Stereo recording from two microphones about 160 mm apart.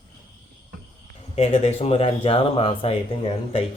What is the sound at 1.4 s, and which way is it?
Speech, 40° left (ahead or behind).